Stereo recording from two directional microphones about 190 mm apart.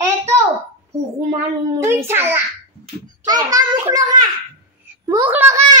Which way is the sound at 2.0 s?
10° right (ahead or behind).